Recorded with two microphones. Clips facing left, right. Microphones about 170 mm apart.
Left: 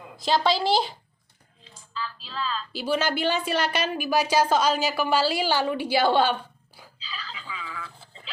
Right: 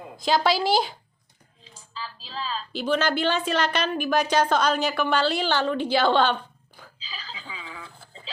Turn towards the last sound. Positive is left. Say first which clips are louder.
# left 2 dB
turn(degrees=-30)  # may be behind; listen again after turning